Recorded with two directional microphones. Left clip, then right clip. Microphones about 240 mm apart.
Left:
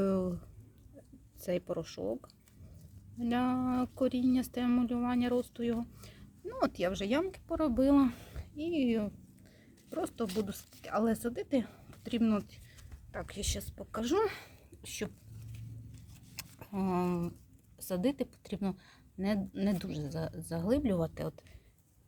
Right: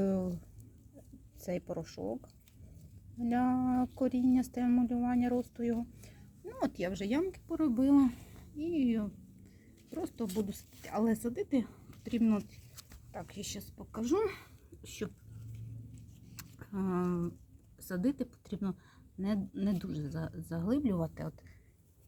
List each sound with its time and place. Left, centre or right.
1.5 s speech: centre
3.2 s speech: centre
6.0 s speech: centre
16.3 s a sound: centre
17.7 s a woman's voice: centre